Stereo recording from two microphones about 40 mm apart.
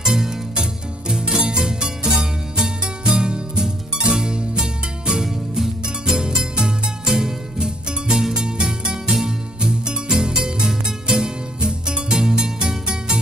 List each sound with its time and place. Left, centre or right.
0.6 s music: centre
3.2 s music: centre